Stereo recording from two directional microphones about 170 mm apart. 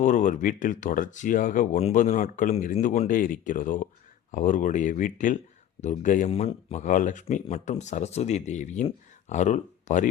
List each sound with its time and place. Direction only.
0.0 s speech: 50° left (ahead or behind)